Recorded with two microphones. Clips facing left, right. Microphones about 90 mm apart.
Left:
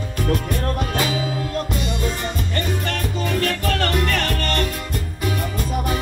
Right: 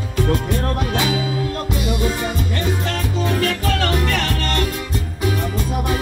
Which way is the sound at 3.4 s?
50° left (ahead or behind).